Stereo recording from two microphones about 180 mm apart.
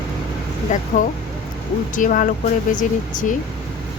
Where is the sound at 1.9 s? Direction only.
50° left (ahead or behind).